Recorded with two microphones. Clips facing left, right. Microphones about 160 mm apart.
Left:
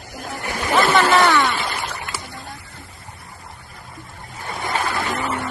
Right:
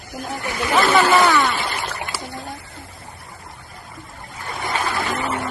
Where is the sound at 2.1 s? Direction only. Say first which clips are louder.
Right 3 dB; 20° right (ahead or behind).